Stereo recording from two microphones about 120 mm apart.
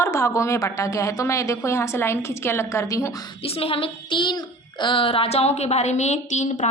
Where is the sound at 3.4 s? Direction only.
50° left (ahead or behind).